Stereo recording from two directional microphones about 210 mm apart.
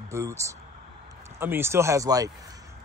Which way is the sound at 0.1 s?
15° right (ahead or behind).